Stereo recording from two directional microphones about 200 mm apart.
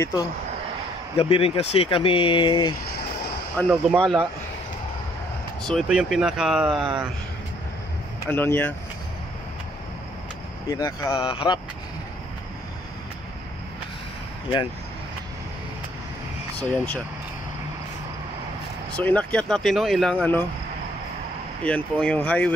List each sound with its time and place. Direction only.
1.1 s speech: 30° left (ahead or behind)
3.5 s speech: 5° left (ahead or behind)
5.6 s speech: centre (ahead or behind)
8.3 s speech: 10° left (ahead or behind)
10.7 s speech: 20° left (ahead or behind)
16.5 s speech: 5° left (ahead or behind)
18.9 s speech: 5° left (ahead or behind)
21.6 s speech: 5° left (ahead or behind)